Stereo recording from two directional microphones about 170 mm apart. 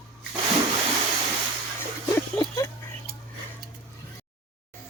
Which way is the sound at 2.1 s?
20° left (ahead or behind).